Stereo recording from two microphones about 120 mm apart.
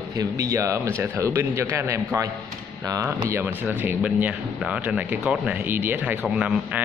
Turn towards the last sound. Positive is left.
turn(degrees=-10)  # may be behind; listen again after turning